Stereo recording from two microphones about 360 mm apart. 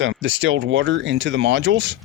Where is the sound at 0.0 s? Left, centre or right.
Right.